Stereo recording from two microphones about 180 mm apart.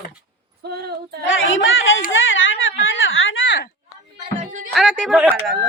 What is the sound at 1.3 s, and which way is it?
A child's voice, 90° left.